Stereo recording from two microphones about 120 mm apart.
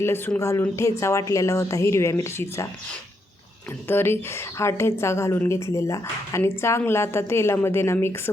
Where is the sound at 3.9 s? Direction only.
20° left (ahead or behind).